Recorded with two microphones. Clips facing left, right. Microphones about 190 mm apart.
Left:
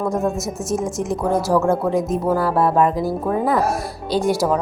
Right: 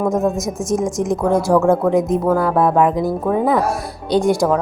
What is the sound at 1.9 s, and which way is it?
Speech, 15° right (ahead or behind).